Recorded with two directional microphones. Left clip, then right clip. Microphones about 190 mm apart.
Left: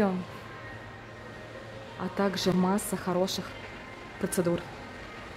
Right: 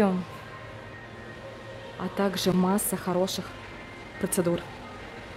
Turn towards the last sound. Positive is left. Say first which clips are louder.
# right 2 dB
turn(degrees=-5)  # may be behind; listen again after turning